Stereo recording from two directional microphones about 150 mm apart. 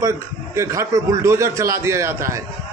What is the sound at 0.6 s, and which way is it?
A man's voice, 20° right (ahead or behind).